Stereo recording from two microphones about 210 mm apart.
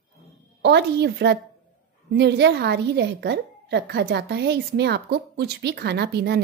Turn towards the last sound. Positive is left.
turn(degrees=-50)  # may be behind; listen again after turning